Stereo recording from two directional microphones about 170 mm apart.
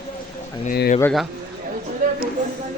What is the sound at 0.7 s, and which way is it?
Speech, 60° left (ahead or behind).